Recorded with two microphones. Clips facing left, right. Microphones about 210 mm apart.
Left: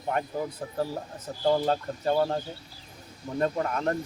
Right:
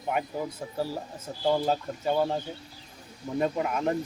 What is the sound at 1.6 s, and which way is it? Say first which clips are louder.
Speech: left 1 dB; 5° right (ahead or behind).